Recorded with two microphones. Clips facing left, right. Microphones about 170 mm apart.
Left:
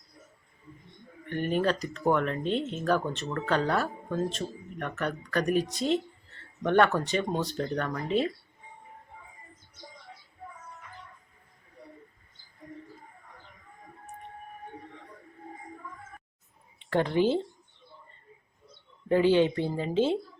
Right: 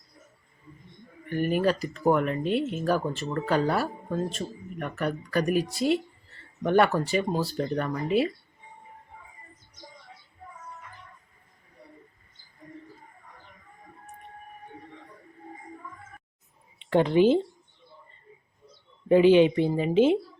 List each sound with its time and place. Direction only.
1.3 s speech: 5° right (ahead or behind)
16.7 s speech: 20° right (ahead or behind)
19.0 s speech: 15° right (ahead or behind)